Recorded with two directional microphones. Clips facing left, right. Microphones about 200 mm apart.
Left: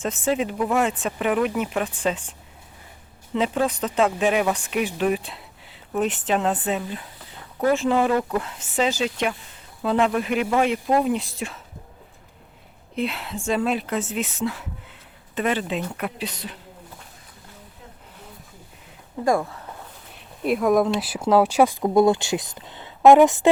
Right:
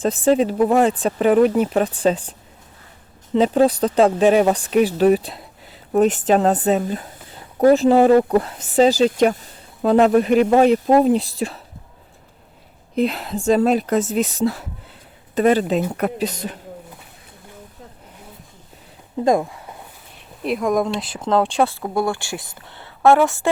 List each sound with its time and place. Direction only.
0.0 s speech: 35° right (ahead or behind)
3.3 s speech: 35° right (ahead or behind)
13.0 s speech: 40° right (ahead or behind)
19.2 s speech: 20° right (ahead or behind)
20.4 s speech: centre (ahead or behind); by 23.5 s 20° left (ahead or behind)